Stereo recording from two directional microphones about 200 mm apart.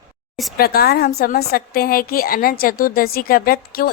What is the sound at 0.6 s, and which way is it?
A woman's voice, 50° left (ahead or behind).